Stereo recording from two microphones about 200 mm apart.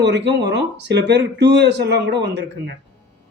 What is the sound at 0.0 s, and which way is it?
Speech, 60° right (ahead or behind).